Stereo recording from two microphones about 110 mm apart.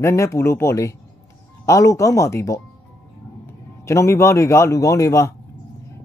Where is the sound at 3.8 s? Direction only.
25° left (ahead or behind).